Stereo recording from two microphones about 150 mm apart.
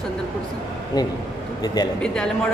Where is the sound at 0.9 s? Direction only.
25° left (ahead or behind).